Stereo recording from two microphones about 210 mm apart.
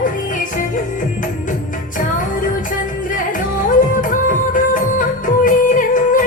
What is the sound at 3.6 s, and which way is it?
Music, 40° left (ahead or behind).